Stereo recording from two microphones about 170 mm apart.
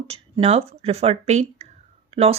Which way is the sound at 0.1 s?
35° right (ahead or behind).